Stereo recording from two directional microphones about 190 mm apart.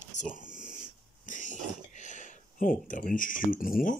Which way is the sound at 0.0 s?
40° left (ahead or behind).